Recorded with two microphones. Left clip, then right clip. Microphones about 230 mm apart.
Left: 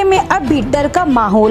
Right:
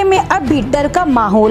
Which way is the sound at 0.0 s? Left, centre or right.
Centre.